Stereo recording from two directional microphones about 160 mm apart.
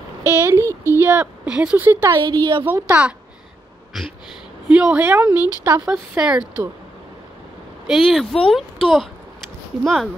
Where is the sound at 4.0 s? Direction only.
Centre (ahead or behind).